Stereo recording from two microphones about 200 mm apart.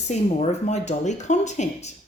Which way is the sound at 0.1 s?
35° left (ahead or behind).